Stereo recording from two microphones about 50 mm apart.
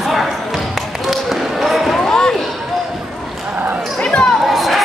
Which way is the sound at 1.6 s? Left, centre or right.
Centre.